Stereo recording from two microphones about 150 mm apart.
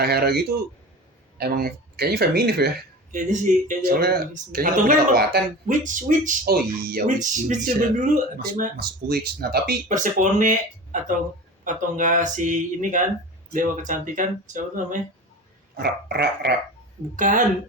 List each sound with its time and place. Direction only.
0.0 s speech: 90° right
5.7 s speech: 60° right (ahead or behind)
11.6 s speech: 60° right (ahead or behind)
15.8 s speech: 90° right
17.2 s speech: 60° right (ahead or behind)